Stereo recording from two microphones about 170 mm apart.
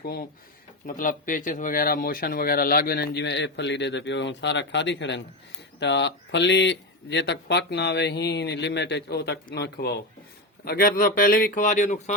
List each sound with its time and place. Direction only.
0.0 s a man's voice: 65° left (ahead or behind)
0.9 s speech: 55° left (ahead or behind); by 10.0 s 75° left (ahead or behind)
10.7 s a man's voice: 60° left (ahead or behind)